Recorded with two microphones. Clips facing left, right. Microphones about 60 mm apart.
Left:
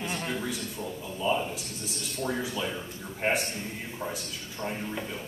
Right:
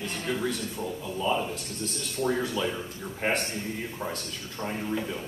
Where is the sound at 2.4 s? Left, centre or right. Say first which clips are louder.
Right 3 dB; centre.